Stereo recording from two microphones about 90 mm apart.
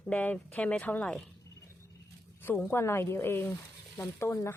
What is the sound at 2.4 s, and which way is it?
Speech, 25° left (ahead or behind).